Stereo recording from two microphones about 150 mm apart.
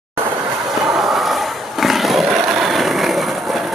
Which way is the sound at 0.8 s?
Centre (ahead or behind).